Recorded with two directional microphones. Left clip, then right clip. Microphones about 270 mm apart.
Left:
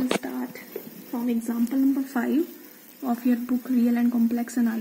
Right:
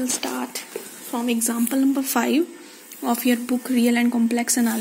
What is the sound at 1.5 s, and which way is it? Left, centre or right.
Speech, right.